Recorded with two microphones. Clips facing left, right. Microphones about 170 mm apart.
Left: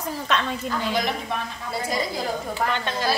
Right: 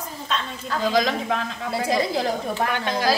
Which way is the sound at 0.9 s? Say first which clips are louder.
Right 4 dB; 90° right.